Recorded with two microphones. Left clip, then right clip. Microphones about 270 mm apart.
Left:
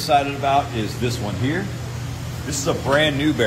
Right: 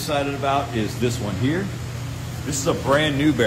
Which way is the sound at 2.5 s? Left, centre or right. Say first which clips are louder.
Even; centre.